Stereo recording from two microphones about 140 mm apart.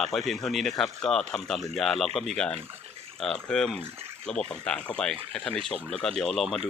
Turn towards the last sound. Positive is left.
turn(degrees=0)  # may be behind; listen again after turning